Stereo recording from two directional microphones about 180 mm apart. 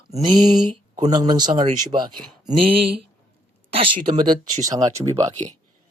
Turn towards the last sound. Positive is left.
turn(degrees=-15)  # may be behind; listen again after turning